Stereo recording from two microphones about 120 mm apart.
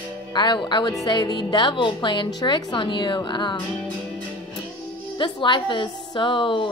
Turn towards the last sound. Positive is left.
turn(degrees=45)  # may be behind; listen again after turning